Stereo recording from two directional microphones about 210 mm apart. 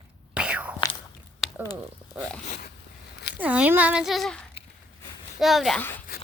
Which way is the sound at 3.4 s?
5° right (ahead or behind).